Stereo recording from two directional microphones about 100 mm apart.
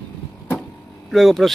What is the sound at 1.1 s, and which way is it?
Speech, centre (ahead or behind).